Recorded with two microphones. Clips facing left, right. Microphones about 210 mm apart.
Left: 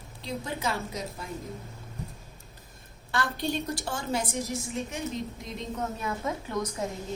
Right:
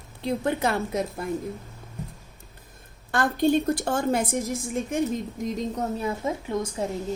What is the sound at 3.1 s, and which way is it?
A woman's voice, 50° right (ahead or behind).